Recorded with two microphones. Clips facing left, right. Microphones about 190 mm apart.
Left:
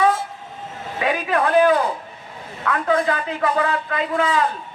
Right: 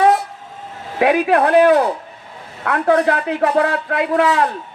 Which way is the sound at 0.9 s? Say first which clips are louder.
Right 7 dB; 70° right (ahead or behind).